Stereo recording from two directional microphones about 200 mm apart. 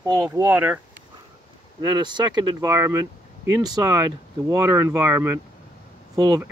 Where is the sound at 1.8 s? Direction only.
20° right (ahead or behind).